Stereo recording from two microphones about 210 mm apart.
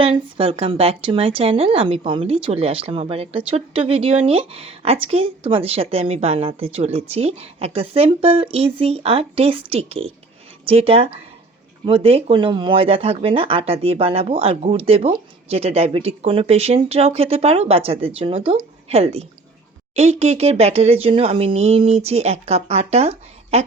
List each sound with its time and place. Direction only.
0.0 s a woman's voice: 25° right (ahead or behind)